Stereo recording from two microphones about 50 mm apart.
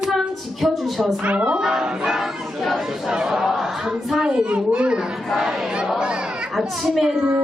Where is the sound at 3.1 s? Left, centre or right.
Centre.